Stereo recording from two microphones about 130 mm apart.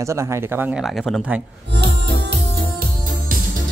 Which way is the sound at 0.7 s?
Centre (ahead or behind).